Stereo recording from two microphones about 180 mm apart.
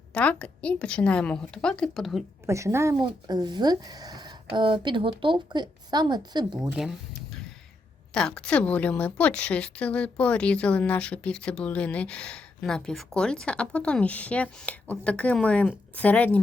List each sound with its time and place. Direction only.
0.1 s a woman's voice: 5° left (ahead or behind)
2.5 s speech: 15° right (ahead or behind)
6.8 s speech: centre (ahead or behind)
8.1 s a woman's voice: 5° left (ahead or behind)